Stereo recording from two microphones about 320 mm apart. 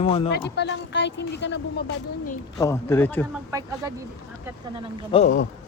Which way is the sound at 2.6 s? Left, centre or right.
Centre.